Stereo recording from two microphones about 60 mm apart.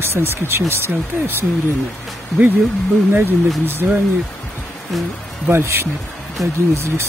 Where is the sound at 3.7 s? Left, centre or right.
Right.